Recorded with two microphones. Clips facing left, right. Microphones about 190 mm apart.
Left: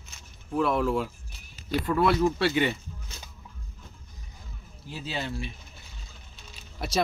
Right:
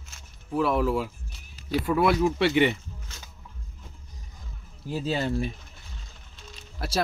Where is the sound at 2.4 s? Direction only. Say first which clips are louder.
Right 3 dB; 20° right (ahead or behind).